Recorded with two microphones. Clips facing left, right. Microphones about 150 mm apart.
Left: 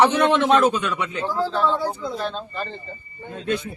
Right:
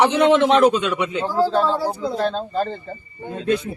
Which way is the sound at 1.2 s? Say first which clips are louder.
Right 3 dB; 35° right (ahead or behind).